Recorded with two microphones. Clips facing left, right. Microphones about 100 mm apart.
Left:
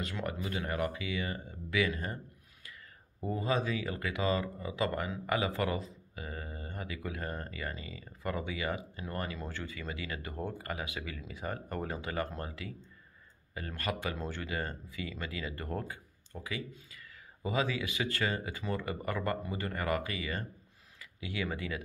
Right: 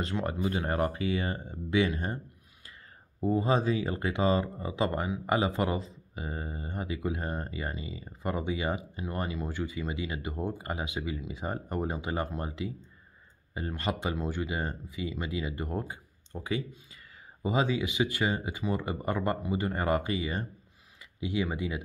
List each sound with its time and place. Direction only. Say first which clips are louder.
0.0 s speech: right 6 dB; 30° right (ahead or behind)
3.2 s speech: right 6 dB; 25° right (ahead or behind)